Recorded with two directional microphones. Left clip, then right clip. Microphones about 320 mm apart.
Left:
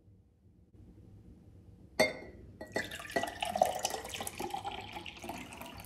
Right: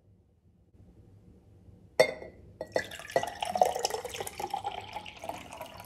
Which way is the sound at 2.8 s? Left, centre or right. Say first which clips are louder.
Right 4 dB; centre.